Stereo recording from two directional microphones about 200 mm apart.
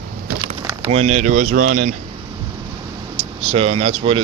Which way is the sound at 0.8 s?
30° right (ahead or behind).